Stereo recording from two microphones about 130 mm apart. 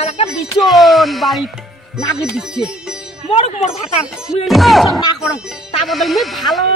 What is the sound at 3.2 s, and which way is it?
Speech, 55° left (ahead or behind).